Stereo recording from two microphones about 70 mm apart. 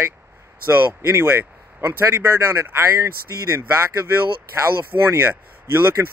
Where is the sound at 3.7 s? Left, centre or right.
Right.